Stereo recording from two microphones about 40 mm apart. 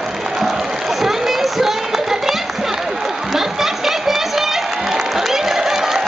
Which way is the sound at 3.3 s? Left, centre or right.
Centre.